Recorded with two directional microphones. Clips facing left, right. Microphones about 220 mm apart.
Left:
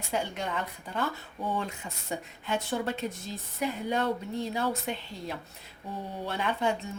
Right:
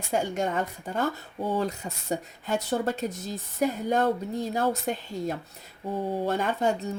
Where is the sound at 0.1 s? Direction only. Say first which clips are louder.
Right 5 dB; 45° right (ahead or behind).